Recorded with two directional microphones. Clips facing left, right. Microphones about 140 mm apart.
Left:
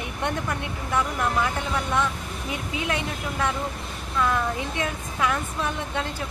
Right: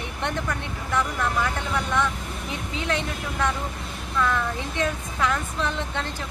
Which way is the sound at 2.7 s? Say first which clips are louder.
Right 1 dB; 15° left (ahead or behind).